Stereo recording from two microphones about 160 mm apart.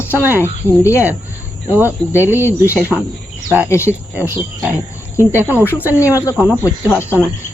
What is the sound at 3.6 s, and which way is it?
Speech, 15° left (ahead or behind).